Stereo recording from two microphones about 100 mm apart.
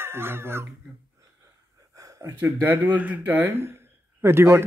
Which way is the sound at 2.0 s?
35° right (ahead or behind).